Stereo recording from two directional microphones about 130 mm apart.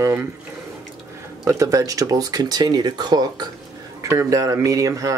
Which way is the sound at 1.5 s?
25° right (ahead or behind).